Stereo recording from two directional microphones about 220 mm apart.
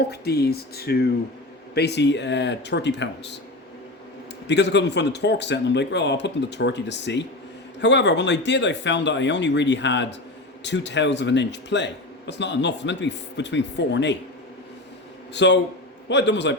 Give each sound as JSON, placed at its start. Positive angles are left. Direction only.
{"t": 0.1, "sound": "speech", "side_deg": 45}
{"t": 4.4, "sound": "speech", "side_deg": 50}
{"t": 15.3, "sound": "a man's voice", "side_deg": 50}